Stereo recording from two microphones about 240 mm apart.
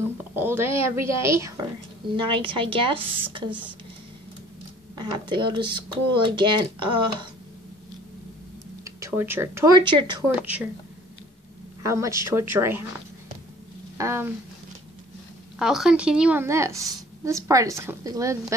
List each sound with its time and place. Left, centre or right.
0.4 s a woman's voice: centre
4.9 s speech: centre
8.8 s speech: centre
11.8 s a woman's voice: centre
13.9 s speech: centre
15.6 s a woman's voice: centre